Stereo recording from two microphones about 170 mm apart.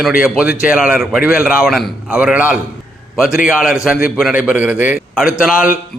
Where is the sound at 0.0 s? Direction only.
5° right (ahead or behind).